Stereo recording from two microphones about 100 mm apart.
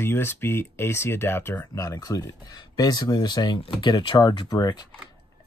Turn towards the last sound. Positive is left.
turn(degrees=40)  # may be behind; listen again after turning